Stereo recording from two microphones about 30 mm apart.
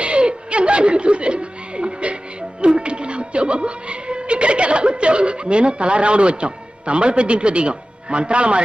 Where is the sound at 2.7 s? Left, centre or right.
Right.